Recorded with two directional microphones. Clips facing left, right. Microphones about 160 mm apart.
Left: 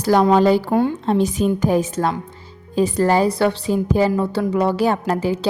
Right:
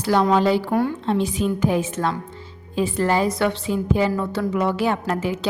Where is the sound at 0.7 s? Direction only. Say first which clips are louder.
Left 3 dB; 25° left (ahead or behind).